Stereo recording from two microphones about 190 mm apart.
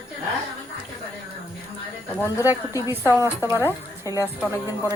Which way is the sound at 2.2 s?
15° left (ahead or behind).